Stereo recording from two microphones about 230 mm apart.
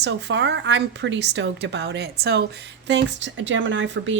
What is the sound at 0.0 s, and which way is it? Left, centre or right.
A woman's voice, right.